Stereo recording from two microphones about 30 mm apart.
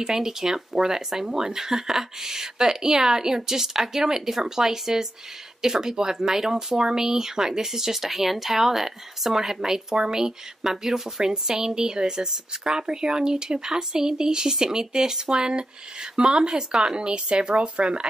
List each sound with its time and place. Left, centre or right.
0.0 s speech: centre
10.6 s speech: centre; by 18.0 s right